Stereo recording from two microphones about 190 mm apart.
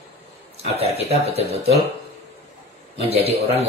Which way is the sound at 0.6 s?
35° right (ahead or behind).